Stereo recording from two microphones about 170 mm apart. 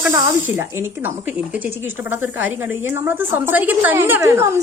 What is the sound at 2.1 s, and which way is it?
A woman's voice, 10° right (ahead or behind).